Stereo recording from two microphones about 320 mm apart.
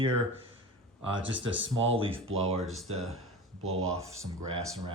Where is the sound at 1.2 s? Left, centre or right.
Right.